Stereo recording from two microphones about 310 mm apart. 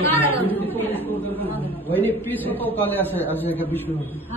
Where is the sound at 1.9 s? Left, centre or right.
Centre.